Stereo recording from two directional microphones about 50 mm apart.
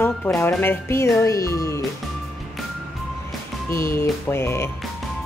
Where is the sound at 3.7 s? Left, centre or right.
Left.